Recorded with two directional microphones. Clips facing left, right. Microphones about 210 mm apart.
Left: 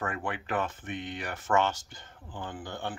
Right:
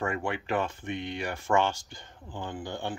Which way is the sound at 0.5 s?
10° right (ahead or behind).